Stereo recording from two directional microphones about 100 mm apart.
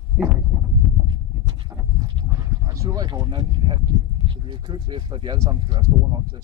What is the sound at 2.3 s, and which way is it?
Speech, 35° right (ahead or behind).